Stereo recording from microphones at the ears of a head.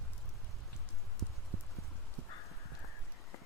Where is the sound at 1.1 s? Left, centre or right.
Right.